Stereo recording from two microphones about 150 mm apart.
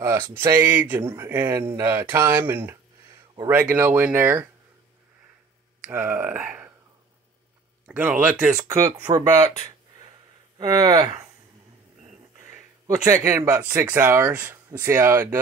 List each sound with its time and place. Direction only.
0.0 s speech: 15° right (ahead or behind)
5.9 s speech: 10° right (ahead or behind)
7.8 s speech: 10° right (ahead or behind)
8.5 s speech: 20° right (ahead or behind)
10.6 s speech: 30° right (ahead or behind)
12.8 s speech: 20° right (ahead or behind)